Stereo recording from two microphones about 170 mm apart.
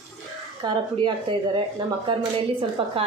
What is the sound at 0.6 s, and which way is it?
Speech, 25° right (ahead or behind).